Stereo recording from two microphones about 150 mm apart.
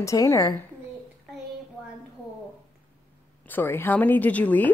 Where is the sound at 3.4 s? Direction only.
15° left (ahead or behind).